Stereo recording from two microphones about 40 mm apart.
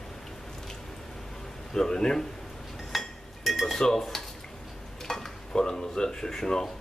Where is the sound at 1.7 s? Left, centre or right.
Centre.